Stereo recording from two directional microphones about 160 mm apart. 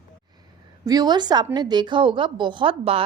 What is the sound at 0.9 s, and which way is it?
A woman's voice, 25° right (ahead or behind).